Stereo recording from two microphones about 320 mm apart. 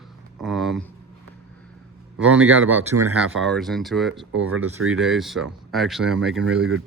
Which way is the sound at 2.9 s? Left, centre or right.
Right.